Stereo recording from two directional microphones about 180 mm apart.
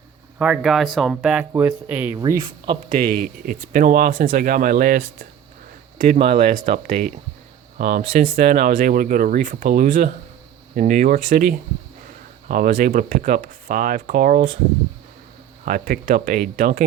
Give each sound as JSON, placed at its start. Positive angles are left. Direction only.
{"t": 0.3, "sound": "speech", "side_deg": -5}
{"t": 2.1, "sound": "speech", "side_deg": -20}
{"t": 2.9, "sound": "speech", "side_deg": -50}
{"t": 15.6, "sound": "speech", "side_deg": -50}